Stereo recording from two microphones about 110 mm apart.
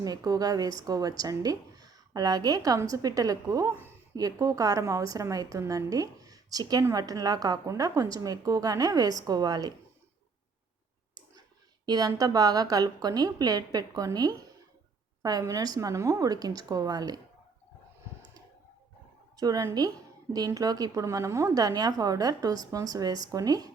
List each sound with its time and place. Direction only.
0.0 s a woman's voice: 35° right (ahead or behind)
11.9 s a woman's voice: 35° right (ahead or behind)
19.4 s a woman's voice: 35° right (ahead or behind)